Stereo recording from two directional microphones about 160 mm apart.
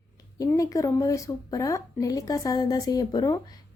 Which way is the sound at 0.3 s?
20° left (ahead or behind).